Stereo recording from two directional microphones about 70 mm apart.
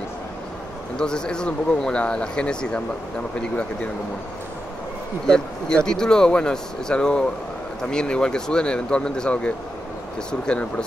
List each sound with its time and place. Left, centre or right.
0.9 s speech: centre
5.2 s speech: centre